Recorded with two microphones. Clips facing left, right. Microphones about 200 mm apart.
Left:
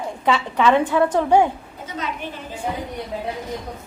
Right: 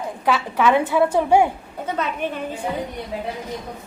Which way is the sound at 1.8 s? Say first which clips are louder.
Right 5 dB; 60° right (ahead or behind).